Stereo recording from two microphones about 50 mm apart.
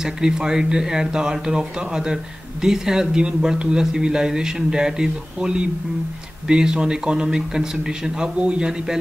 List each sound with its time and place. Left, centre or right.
0.0 s speech: centre